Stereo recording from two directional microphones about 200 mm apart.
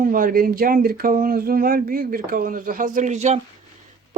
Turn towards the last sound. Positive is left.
turn(degrees=-35)  # may be behind; listen again after turning